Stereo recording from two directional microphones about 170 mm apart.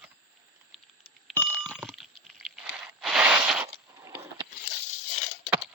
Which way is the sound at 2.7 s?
5° right (ahead or behind).